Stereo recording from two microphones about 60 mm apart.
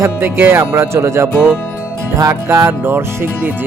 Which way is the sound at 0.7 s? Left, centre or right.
Right.